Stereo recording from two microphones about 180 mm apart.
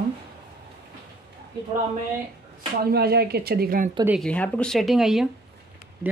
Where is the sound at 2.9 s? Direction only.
60° right (ahead or behind).